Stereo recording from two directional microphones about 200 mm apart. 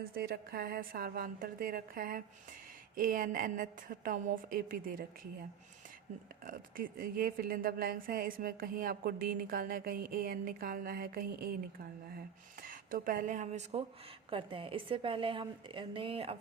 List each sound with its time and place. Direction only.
0.0 s a woman's voice: 50° right (ahead or behind)
6.4 s a woman's voice: 45° right (ahead or behind)
12.6 s a woman's voice: 45° right (ahead or behind)